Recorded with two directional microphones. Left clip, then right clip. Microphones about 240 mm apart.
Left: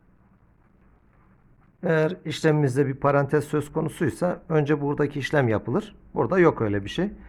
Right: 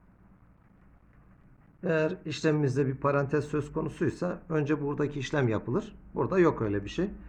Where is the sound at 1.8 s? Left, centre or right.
Left.